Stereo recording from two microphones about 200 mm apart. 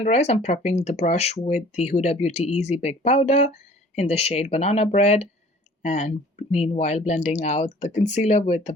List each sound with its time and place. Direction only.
0.0 s speech: 35° left (ahead or behind)